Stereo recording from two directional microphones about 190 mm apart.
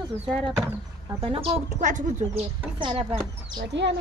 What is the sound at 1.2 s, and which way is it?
Speech, 30° right (ahead or behind).